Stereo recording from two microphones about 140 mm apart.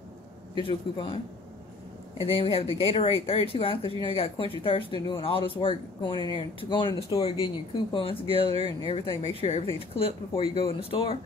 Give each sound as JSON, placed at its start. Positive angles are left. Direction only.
{"t": 0.6, "sound": "speech", "side_deg": 40}
{"t": 2.1, "sound": "speech", "side_deg": 40}